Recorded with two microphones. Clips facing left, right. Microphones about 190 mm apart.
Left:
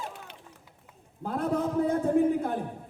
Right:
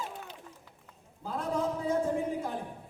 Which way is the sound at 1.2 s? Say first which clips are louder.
Left 4 dB; 60° left (ahead or behind).